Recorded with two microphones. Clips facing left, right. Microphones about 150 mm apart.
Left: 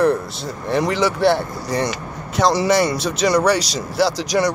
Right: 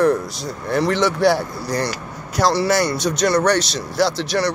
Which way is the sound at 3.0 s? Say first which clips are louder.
Even; 5° left (ahead or behind).